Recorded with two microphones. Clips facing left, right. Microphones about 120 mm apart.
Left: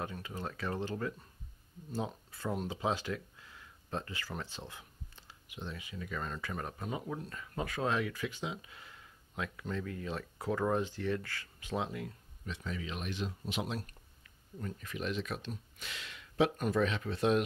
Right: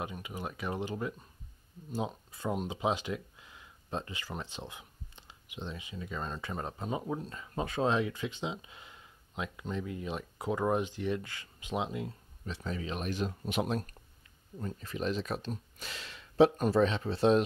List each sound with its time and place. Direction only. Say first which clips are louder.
0.0 s speech: right 1 dB; 15° right (ahead or behind)
12.4 s speech: right 3 dB; 35° right (ahead or behind)
14.6 s speech: right 4 dB; 30° right (ahead or behind)